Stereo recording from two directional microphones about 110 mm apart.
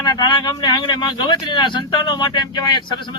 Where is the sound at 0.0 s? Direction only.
40° left (ahead or behind).